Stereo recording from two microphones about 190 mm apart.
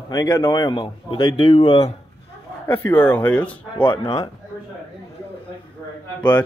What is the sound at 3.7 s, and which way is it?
Speech, 25° left (ahead or behind).